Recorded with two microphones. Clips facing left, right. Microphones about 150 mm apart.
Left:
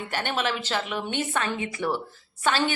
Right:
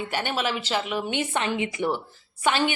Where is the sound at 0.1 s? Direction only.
10° right (ahead or behind).